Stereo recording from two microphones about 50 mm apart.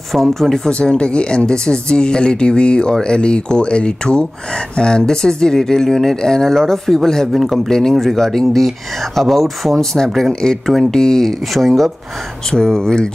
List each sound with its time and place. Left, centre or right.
0.1 s speech: centre
0.7 s speech: left